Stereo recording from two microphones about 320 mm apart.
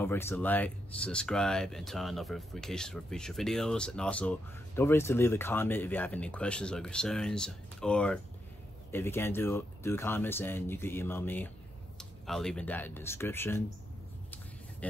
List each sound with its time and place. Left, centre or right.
0.0 s speech: centre